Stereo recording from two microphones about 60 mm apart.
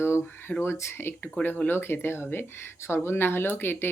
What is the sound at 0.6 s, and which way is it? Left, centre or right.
Speech, left.